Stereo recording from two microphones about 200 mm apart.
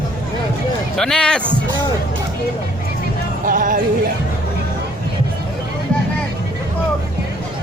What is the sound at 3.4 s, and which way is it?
Music, 45° right (ahead or behind).